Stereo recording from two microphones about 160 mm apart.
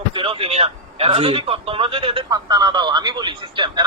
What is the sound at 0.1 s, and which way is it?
A man's voice, 35° right (ahead or behind).